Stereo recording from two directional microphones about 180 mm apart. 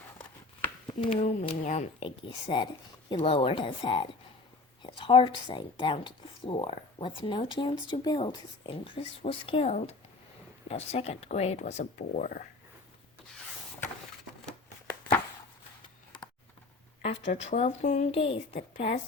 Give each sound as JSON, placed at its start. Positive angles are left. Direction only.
{"t": 0.6, "sound": "speech", "side_deg": 25}
{"t": 17.0, "sound": "speech", "side_deg": 40}